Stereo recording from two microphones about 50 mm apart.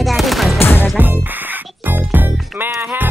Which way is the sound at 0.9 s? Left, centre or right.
Right.